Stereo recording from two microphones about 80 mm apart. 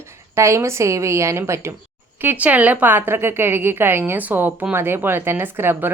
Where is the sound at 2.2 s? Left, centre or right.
Right.